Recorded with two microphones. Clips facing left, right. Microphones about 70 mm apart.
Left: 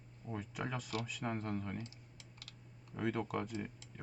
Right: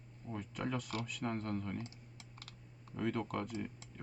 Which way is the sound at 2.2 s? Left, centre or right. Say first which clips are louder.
Right 3 dB; right.